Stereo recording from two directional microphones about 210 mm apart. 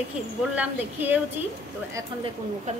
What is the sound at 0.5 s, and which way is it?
Speech, 10° right (ahead or behind).